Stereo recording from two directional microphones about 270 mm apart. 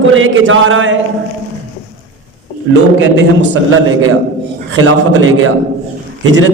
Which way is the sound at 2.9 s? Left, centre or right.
Right.